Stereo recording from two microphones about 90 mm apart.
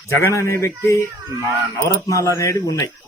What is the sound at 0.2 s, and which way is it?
Speech, 30° left (ahead or behind).